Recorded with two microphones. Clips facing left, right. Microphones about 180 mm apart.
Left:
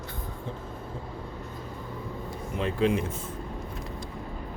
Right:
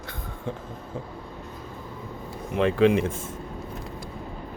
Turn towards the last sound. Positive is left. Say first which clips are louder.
# right 5 dB
turn(degrees=-80)